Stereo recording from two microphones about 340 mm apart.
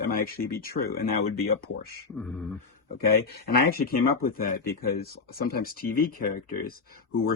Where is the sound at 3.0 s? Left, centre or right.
Left.